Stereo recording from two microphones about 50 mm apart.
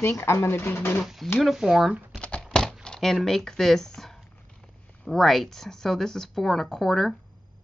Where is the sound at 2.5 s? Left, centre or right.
Centre.